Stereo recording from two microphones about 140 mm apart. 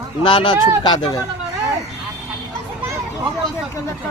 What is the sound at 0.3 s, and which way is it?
Speech, 35° left (ahead or behind).